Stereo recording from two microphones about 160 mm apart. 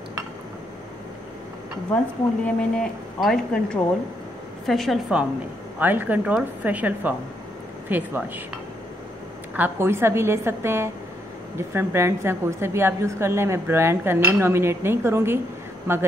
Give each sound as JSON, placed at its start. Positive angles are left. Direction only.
{"t": 2.4, "sound": "speech", "side_deg": 5}
{"t": 5.8, "sound": "a woman's voice", "side_deg": -10}
{"t": 9.6, "sound": "a woman's voice", "side_deg": -15}